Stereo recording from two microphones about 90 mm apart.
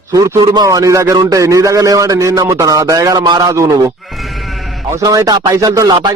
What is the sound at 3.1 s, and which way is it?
Speech, 55° right (ahead or behind).